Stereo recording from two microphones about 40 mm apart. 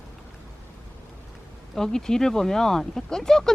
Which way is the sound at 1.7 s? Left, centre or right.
Centre.